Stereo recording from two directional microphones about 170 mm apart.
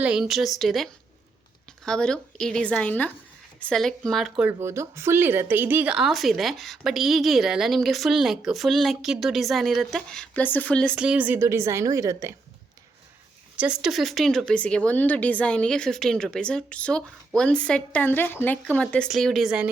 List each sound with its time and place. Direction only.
0.0 s speech: 5° right (ahead or behind)
4.4 s speech: 15° right (ahead or behind); by 10.9 s 5° left (ahead or behind)
10.9 s a woman's voice: 5° right (ahead or behind)
13.6 s speech: 5° right (ahead or behind)